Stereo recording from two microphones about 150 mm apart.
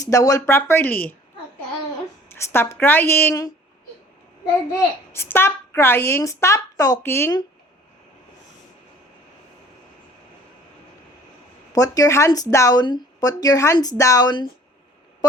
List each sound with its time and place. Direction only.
0.0 s a woman's voice: 20° left (ahead or behind)
2.3 s a woman's voice: 15° left (ahead or behind)
5.1 s a woman's voice: 15° left (ahead or behind)
11.7 s speech: 25° left (ahead or behind)